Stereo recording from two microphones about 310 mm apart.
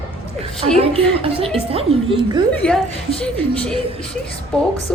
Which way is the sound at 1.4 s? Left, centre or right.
Centre.